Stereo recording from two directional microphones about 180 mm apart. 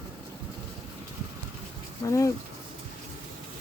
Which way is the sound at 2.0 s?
15° left (ahead or behind).